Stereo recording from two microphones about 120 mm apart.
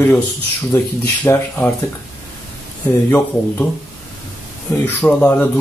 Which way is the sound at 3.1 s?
15° left (ahead or behind).